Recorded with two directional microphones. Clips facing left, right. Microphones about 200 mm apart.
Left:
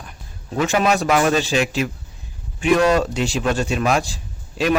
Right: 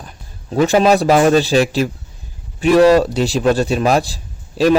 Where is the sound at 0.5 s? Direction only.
35° right (ahead or behind).